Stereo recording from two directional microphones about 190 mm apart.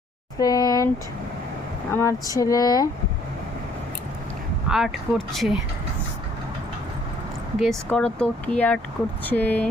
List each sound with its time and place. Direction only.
0.3 s speech: 20° left (ahead or behind)
1.9 s speech: 15° left (ahead or behind)
4.7 s speech: centre (ahead or behind)
7.6 s speech: 5° left (ahead or behind)